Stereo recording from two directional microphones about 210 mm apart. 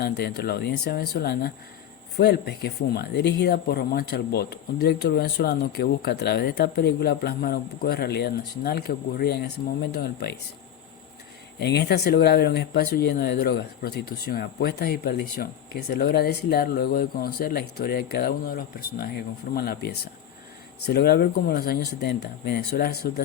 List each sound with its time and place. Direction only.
0.0 s speech: 50° left (ahead or behind)
11.6 s speech: 50° left (ahead or behind)